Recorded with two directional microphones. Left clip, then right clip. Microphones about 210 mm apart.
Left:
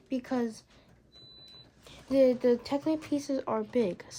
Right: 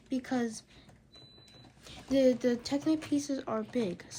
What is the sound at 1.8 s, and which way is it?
Speech, 20° left (ahead or behind).